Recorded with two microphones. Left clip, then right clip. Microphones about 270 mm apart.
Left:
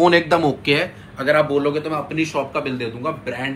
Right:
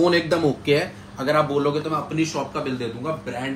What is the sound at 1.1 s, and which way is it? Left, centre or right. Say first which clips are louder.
A man's voice: left 3 dB; centre.